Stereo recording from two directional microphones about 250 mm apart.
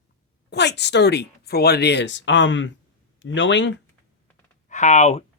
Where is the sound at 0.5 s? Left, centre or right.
Left.